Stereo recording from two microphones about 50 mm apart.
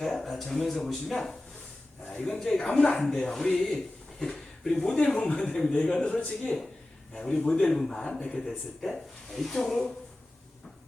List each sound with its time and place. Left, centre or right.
0.0 s speech: centre
4.2 s a sound: centre
4.8 s speech: centre
7.1 s speech: centre
8.4 s speech: centre